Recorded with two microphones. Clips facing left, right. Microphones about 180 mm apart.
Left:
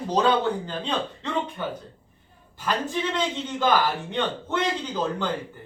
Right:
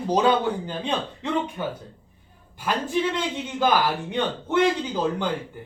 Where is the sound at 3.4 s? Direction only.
10° right (ahead or behind).